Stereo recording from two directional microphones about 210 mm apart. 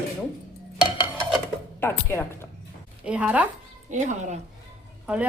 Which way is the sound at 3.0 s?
5° right (ahead or behind).